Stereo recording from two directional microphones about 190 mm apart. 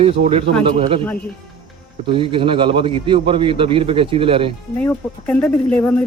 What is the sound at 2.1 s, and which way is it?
Speech, 25° right (ahead or behind).